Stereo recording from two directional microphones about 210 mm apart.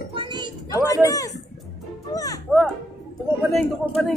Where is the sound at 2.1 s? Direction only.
15° left (ahead or behind).